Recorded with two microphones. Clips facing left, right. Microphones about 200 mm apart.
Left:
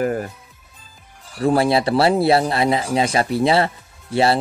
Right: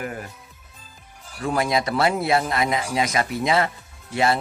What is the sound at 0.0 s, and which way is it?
Speech, 40° left (ahead or behind).